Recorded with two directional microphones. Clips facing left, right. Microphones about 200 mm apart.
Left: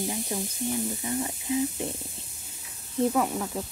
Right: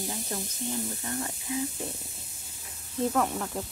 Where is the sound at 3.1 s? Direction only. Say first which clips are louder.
Left 2 dB; 10° left (ahead or behind).